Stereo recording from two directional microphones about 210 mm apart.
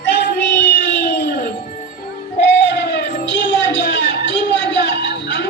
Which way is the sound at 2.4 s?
55° left (ahead or behind).